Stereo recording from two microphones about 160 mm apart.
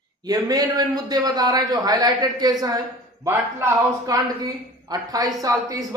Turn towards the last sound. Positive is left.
turn(degrees=-20)  # may be behind; listen again after turning